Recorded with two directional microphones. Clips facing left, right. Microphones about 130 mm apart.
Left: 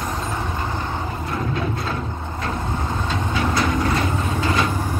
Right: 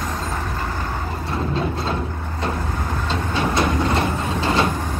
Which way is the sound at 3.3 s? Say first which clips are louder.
Right 1 dB; 25° right (ahead or behind).